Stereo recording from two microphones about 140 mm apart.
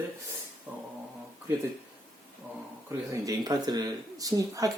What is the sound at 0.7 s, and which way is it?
Speech, 10° right (ahead or behind).